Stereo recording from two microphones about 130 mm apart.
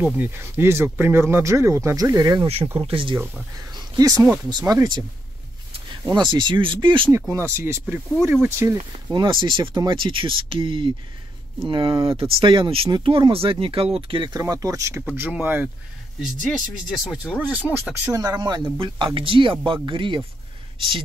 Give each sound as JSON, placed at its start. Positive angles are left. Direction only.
{"t": 0.0, "sound": "speech", "side_deg": -15}
{"t": 2.4, "sound": "speech", "side_deg": -50}
{"t": 3.5, "sound": "speech", "side_deg": -30}
{"t": 6.1, "sound": "speech", "side_deg": -35}
{"t": 7.1, "sound": "speech", "side_deg": -20}
{"t": 9.1, "sound": "speech", "side_deg": -40}
{"t": 14.4, "sound": "speech", "side_deg": -25}
{"t": 15.0, "sound": "speech", "side_deg": -10}
{"t": 16.4, "sound": "speech", "side_deg": 5}
{"t": 17.2, "sound": "speech", "side_deg": -10}
{"t": 18.1, "sound": "speech", "side_deg": -30}
{"t": 18.8, "sound": "speech", "side_deg": -40}